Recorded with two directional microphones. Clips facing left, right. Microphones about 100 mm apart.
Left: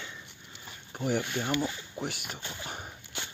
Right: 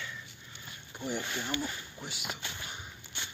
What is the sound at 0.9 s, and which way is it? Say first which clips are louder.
Speech: left 6 dB; 55° left (ahead or behind).